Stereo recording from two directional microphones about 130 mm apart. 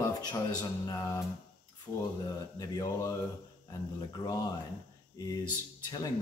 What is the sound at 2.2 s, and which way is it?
Speech, 30° left (ahead or behind).